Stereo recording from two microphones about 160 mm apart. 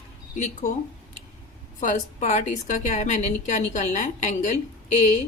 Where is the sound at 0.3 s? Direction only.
45° left (ahead or behind).